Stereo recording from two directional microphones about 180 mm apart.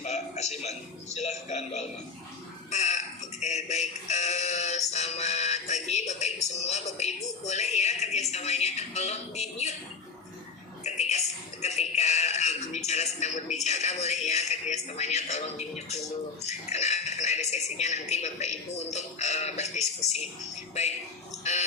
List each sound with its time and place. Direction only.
0.0 s a man's voice: 40° left (ahead or behind)
2.6 s burping: 40° left (ahead or behind)
3.4 s synthetic singing: 40° left (ahead or behind)
7.4 s speech: 40° left (ahead or behind)
10.8 s music: 40° left (ahead or behind)
11.6 s a man's voice: 40° left (ahead or behind)